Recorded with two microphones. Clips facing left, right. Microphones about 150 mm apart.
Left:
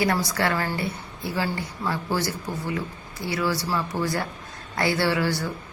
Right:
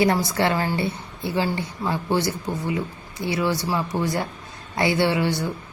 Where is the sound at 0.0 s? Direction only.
25° right (ahead or behind).